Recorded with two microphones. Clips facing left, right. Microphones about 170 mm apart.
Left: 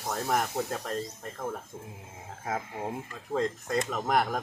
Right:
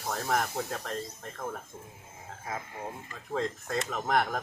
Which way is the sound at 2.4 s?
65° left (ahead or behind).